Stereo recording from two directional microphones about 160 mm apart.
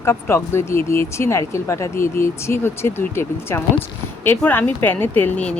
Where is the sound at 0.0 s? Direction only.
15° left (ahead or behind).